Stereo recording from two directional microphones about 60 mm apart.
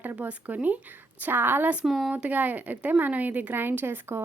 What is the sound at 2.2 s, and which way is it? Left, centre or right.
A woman's voice, right.